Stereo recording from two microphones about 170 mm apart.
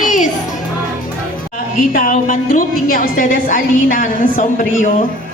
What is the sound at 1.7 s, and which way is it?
A woman's voice, 50° left (ahead or behind).